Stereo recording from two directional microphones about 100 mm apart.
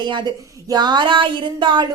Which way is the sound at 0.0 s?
50° right (ahead or behind).